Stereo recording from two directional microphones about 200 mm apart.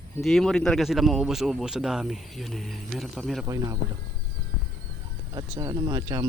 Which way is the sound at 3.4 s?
15° right (ahead or behind).